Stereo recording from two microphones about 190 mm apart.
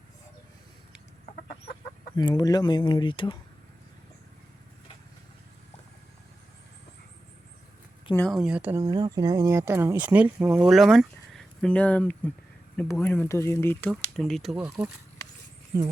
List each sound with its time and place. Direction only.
2.1 s speech: 20° left (ahead or behind)
8.1 s speech: 5° left (ahead or behind)
8.9 s speech: 20° right (ahead or behind); by 13.9 s 10° left (ahead or behind)
13.9 s speech: centre (ahead or behind)